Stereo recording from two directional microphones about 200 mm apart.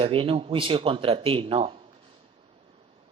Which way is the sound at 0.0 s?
25° right (ahead or behind).